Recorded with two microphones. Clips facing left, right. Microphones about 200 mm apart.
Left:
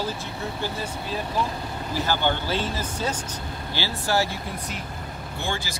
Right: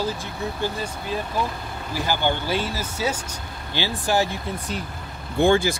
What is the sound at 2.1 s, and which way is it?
Speech, 15° right (ahead or behind).